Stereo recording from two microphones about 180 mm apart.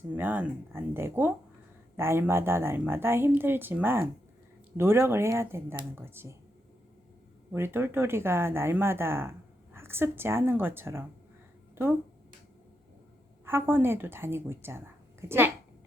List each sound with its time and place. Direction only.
0.1 s a woman's voice: 10° right (ahead or behind)
7.5 s a woman's voice: 15° right (ahead or behind)
13.4 s a woman's voice: 15° right (ahead or behind)